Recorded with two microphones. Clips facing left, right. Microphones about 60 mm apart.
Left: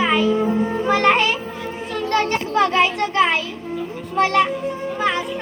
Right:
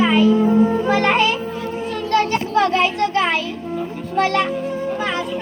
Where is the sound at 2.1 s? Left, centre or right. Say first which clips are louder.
Right 2 dB; left.